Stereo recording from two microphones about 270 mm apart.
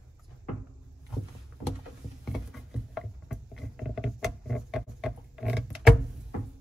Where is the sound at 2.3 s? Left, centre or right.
Centre.